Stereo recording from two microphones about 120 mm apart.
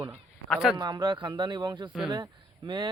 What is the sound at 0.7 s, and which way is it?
Speech, 40° right (ahead or behind).